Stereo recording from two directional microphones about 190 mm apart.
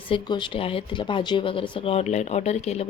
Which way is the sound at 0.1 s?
25° left (ahead or behind).